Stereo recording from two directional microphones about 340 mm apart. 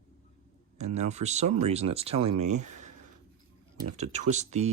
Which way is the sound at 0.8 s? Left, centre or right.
Centre.